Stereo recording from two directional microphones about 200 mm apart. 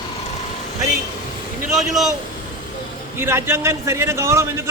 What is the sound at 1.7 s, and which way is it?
Speech, centre (ahead or behind).